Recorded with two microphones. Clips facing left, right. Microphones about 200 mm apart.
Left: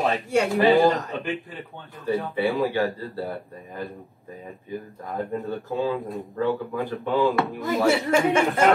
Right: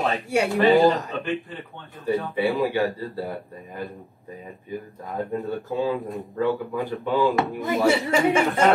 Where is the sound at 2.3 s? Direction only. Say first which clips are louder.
Even; 20° right (ahead or behind).